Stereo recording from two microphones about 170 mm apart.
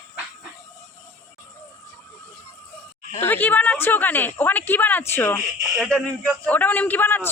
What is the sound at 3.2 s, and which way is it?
A woman's voice, 10° left (ahead or behind).